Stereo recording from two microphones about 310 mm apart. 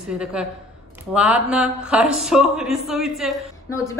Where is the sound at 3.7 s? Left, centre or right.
Centre.